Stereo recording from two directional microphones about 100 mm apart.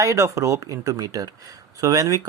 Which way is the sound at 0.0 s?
30° right (ahead or behind).